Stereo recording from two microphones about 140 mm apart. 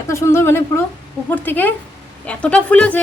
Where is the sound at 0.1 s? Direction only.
20° left (ahead or behind).